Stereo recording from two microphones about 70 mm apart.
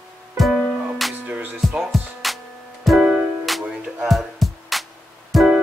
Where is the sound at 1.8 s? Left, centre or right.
Centre.